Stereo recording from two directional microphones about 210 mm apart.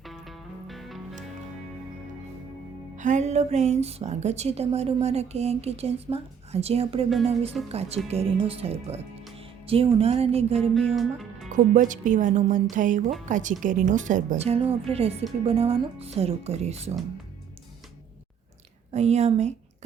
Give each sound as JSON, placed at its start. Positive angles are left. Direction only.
{"t": 0.0, "sound": "music", "side_deg": 0}
{"t": 3.0, "sound": "a woman's voice", "side_deg": -35}
{"t": 10.9, "sound": "speech", "side_deg": 0}
{"t": 11.4, "sound": "a woman's voice", "side_deg": -35}
{"t": 18.9, "sound": "a woman's voice", "side_deg": -30}